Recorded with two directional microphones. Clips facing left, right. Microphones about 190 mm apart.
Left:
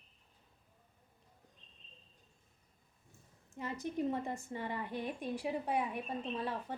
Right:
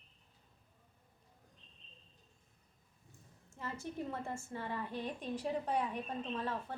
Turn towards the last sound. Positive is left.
turn(degrees=10)  # may be behind; listen again after turning